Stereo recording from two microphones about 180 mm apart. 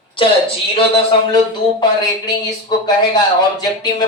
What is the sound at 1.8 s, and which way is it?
Speech, 25° left (ahead or behind).